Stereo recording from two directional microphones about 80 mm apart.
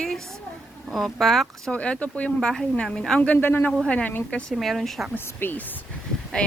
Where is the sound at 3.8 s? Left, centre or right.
Centre.